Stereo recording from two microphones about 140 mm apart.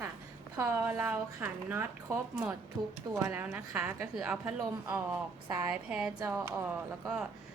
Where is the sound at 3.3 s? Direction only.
15° right (ahead or behind).